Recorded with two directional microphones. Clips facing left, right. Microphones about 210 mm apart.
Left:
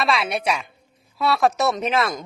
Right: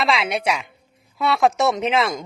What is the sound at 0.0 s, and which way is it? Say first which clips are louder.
A woman's voice: right 1 dB; 20° right (ahead or behind).